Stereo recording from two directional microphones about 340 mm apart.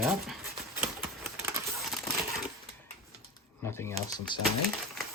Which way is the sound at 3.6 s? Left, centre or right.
Centre.